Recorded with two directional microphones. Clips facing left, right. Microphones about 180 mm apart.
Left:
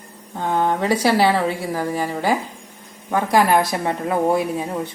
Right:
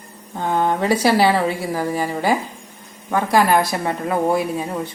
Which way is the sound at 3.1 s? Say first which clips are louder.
Even; 20° left (ahead or behind).